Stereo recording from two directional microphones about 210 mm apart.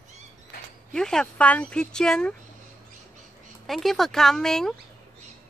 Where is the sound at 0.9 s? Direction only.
5° left (ahead or behind).